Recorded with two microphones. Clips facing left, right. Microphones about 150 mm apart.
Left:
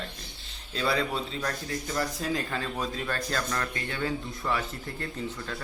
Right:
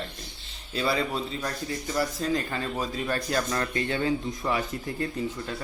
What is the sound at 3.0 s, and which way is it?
A man's voice, 15° right (ahead or behind).